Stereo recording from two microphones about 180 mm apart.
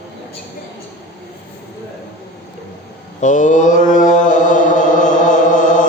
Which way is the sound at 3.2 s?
45° left (ahead or behind).